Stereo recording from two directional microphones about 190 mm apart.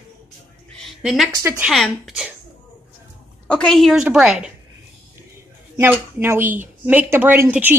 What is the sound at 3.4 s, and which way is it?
A woman's voice, 5° left (ahead or behind).